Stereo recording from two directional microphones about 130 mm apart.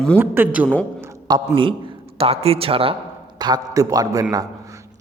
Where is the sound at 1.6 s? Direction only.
40° right (ahead or behind).